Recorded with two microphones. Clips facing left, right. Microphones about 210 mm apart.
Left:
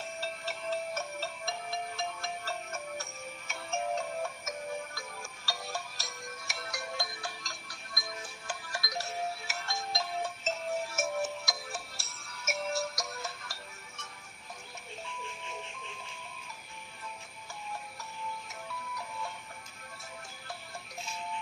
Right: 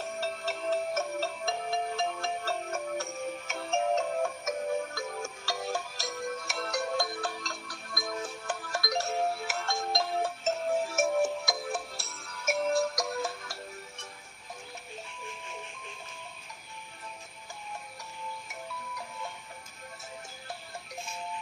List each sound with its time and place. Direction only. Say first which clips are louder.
0.0 s music: right 5 dB; 50° right (ahead or behind)